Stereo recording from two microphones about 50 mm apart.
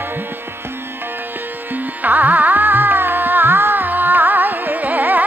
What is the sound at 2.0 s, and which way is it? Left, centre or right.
Carnatic music, right.